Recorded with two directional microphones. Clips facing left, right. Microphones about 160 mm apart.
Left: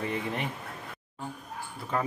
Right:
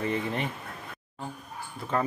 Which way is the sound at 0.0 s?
10° left (ahead or behind).